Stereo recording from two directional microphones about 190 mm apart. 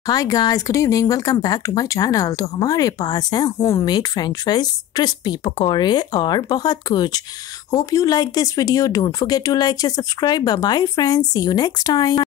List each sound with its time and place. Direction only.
0.0 s speech: 20° left (ahead or behind)